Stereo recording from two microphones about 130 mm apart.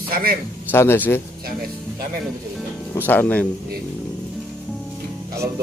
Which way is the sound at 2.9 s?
15° left (ahead or behind).